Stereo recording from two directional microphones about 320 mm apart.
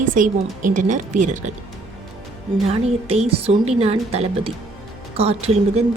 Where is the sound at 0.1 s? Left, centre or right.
Right.